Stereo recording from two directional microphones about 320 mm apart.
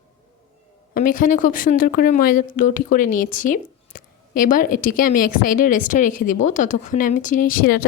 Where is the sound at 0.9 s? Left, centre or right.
Left.